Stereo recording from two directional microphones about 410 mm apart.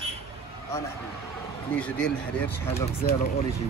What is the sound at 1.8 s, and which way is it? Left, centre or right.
Speech, centre.